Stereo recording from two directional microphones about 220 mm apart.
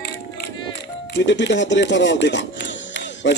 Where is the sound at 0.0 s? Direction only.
50° left (ahead or behind).